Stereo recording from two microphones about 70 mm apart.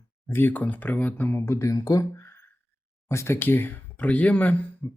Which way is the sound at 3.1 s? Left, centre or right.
Left.